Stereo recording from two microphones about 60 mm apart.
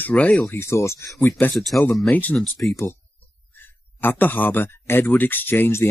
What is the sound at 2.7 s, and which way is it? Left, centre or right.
Speech, left.